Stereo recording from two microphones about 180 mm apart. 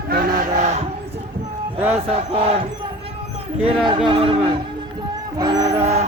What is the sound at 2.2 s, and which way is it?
Crowd, 30° right (ahead or behind).